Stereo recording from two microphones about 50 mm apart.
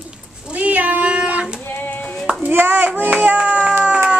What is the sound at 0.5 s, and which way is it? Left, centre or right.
Cat, right.